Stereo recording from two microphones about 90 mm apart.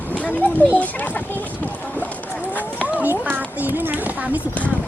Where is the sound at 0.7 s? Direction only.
15° left (ahead or behind).